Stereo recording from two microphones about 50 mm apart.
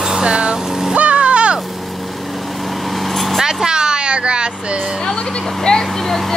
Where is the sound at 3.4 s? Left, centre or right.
Centre.